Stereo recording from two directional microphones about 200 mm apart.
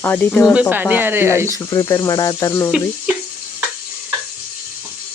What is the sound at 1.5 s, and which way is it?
Speech, 20° left (ahead or behind).